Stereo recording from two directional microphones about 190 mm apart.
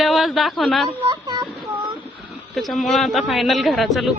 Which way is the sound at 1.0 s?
25° right (ahead or behind).